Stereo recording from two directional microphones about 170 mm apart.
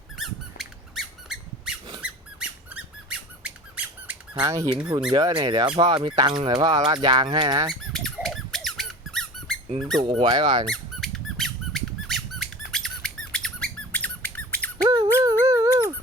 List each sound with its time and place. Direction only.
0.2 s squeak: centre (ahead or behind)
4.4 s speech: 20° right (ahead or behind)
7.7 s squeak: centre (ahead or behind)
10.0 s speech: 30° right (ahead or behind)
10.7 s squeak: centre (ahead or behind)
14.8 s squeak: 25° right (ahead or behind)